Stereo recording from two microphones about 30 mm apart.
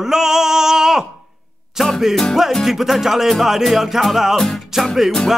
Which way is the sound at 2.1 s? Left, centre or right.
Centre.